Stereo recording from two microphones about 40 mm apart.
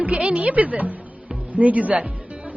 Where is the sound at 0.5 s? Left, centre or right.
Right.